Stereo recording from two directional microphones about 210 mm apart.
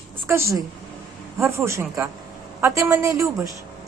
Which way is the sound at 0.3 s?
10° right (ahead or behind).